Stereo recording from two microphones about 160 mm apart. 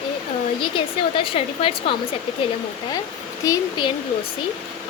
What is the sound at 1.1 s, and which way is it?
Speech, 35° left (ahead or behind).